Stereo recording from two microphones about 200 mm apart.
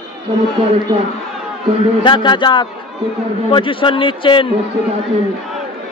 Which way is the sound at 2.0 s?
25° left (ahead or behind).